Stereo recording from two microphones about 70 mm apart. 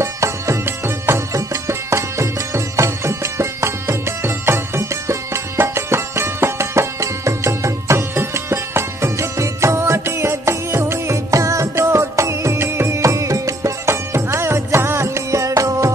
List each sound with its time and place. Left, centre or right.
0.0 s music: right
1.3 s music: right